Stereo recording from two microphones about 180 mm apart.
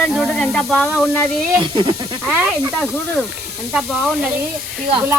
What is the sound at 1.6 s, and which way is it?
Speech, 20° right (ahead or behind).